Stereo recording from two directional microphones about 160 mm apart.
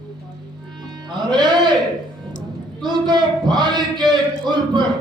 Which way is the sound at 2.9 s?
25° right (ahead or behind).